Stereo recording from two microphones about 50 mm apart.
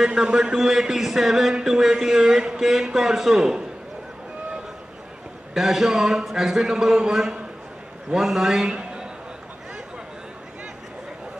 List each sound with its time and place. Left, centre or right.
0.0 s a man's voice: centre
5.5 s a man's voice: centre
8.7 s a sound: centre